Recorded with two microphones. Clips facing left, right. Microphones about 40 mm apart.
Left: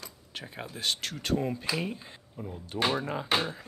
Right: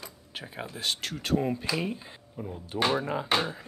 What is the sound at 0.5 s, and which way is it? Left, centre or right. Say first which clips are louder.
Speech: even; centre.